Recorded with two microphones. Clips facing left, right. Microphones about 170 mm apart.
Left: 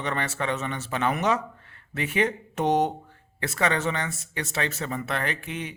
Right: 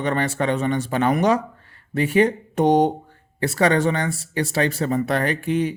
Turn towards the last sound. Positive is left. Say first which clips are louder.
# right 10 dB
turn(degrees=-35)  # may be behind; listen again after turning